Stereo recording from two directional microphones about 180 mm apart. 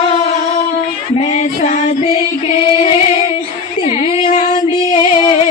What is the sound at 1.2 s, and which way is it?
Female singing, 40° left (ahead or behind).